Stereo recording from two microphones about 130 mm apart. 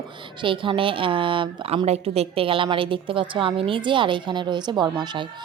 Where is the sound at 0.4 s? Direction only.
40° right (ahead or behind).